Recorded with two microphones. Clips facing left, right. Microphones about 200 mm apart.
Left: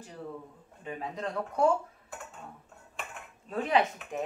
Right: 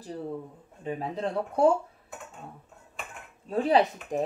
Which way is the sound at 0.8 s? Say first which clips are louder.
Right 5 dB; 30° right (ahead or behind).